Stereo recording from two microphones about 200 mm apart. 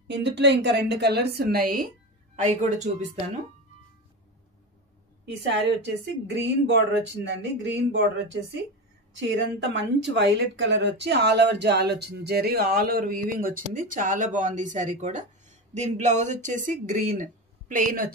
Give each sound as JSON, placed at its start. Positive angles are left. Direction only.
{"t": 0.1, "sound": "a woman's voice", "side_deg": -60}
{"t": 2.3, "sound": "speech", "side_deg": -35}
{"t": 5.2, "sound": "a woman's voice", "side_deg": -60}